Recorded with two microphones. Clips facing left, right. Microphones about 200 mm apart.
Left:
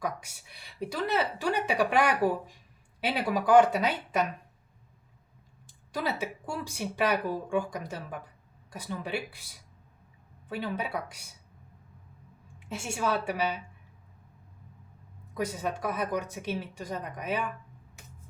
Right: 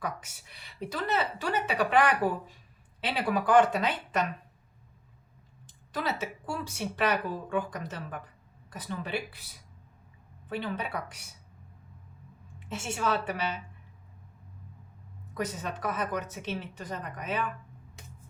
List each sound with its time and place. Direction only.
0.0 s speech: 10° left (ahead or behind)
5.6 s speech: 10° left (ahead or behind)
10.5 s speech: 10° left (ahead or behind)
12.5 s speech: 10° left (ahead or behind)
15.4 s speech: 10° left (ahead or behind)